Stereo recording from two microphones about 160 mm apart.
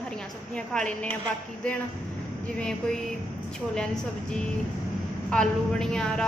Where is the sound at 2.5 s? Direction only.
5° left (ahead or behind).